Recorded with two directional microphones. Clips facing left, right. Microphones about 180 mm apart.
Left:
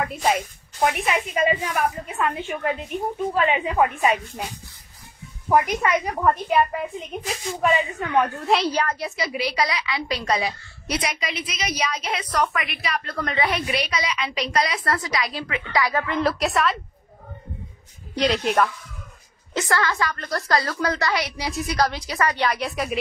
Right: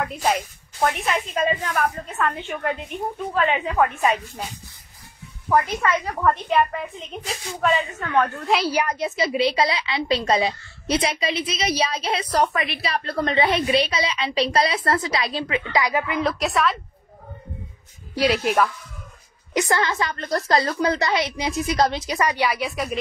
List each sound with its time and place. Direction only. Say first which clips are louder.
0.0 s a woman's voice: even; centre (ahead or behind)
5.5 s a woman's voice: left 1 dB; 15° left (ahead or behind)
7.6 s a woman's voice: even; 15° left (ahead or behind)
8.5 s a woman's voice: left 1 dB; centre (ahead or behind)
8.7 s a woman's voice: right 2 dB; 20° right (ahead or behind)
16.2 s a woman's voice: left 2 dB; centre (ahead or behind)
18.1 s a woman's voice: right 1 dB; 5° right (ahead or behind)
19.5 s a woman's voice: right 2 dB; 20° right (ahead or behind); by 22.9 s centre (ahead or behind)